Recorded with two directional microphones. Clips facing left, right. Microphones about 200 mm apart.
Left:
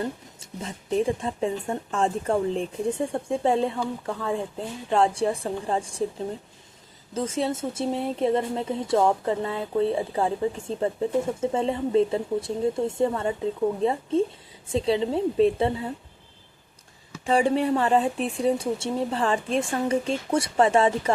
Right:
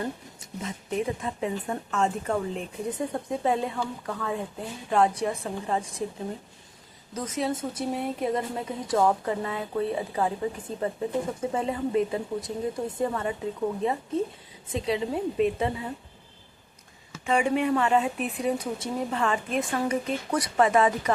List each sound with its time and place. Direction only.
0.3 s speech: 30° left (ahead or behind)
7.1 s speech: 25° left (ahead or behind)
17.2 s speech: 30° left (ahead or behind)